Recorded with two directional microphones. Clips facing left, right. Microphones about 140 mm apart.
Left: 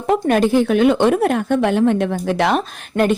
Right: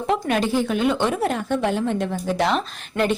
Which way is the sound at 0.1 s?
50° left (ahead or behind).